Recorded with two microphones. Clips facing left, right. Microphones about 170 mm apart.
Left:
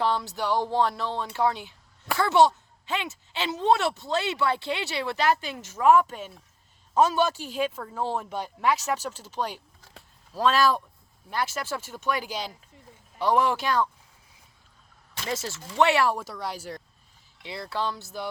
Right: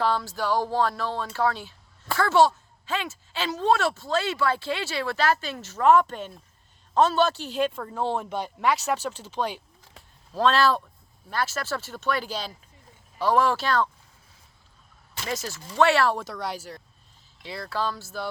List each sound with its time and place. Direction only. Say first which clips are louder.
0.0 s speech: right 1 dB; 20° left (ahead or behind)
15.3 s speech: even; 25° left (ahead or behind)
15.8 s speech: right 1 dB; 15° left (ahead or behind); by 16.8 s 5° right (ahead or behind)
17.4 s speech: right 1 dB; 20° left (ahead or behind)